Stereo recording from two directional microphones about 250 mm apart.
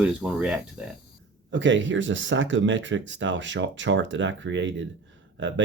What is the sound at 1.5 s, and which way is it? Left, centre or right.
Speech, right.